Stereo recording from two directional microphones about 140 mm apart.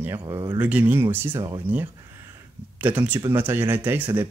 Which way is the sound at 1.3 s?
30° right (ahead or behind).